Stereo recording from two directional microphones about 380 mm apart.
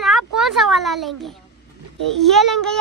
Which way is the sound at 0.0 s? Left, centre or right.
Centre.